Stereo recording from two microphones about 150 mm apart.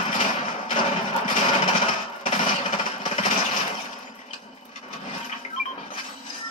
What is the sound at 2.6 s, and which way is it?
Jackhammer, 45° left (ahead or behind).